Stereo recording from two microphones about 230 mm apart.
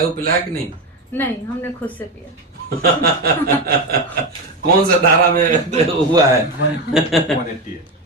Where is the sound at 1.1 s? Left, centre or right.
Centre.